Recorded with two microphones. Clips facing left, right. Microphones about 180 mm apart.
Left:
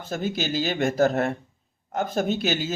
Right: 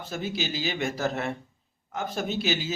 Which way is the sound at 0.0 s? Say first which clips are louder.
Left 4 dB; 50° left (ahead or behind).